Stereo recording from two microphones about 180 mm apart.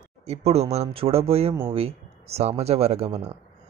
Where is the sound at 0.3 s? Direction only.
35° right (ahead or behind).